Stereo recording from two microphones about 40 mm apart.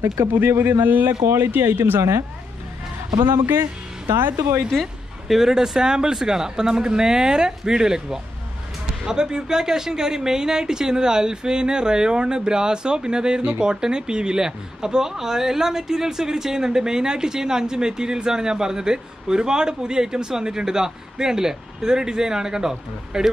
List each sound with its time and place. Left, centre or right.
0.3 s a man's voice: right
1.2 s speech: right
4.2 s speech: right
5.3 s speech: centre